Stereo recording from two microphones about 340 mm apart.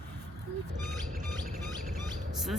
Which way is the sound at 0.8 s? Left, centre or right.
Centre.